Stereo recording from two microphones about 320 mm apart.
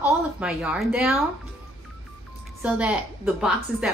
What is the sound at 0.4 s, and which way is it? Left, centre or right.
Speech, centre.